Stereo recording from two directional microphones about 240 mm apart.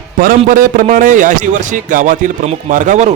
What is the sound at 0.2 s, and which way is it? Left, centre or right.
A man's voice, right.